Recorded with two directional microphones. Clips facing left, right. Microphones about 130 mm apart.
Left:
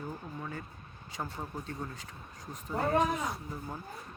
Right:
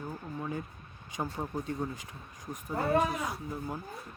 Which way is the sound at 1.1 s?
15° right (ahead or behind).